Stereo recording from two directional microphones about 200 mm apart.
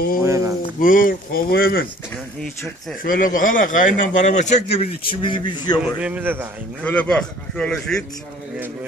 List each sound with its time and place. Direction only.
0.2 s a sound: 15° right (ahead or behind)
0.7 s speech: 45° left (ahead or behind)
2.4 s a man's voice: 5° left (ahead or behind)
3.0 s a man's voice: 45° left (ahead or behind); by 5.8 s 25° left (ahead or behind)
5.9 s a man's voice: 5° right (ahead or behind)
6.8 s a man's voice: 5° left (ahead or behind)